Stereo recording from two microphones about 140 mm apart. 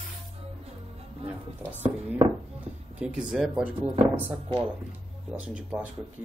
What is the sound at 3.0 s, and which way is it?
Speech, 5° right (ahead or behind).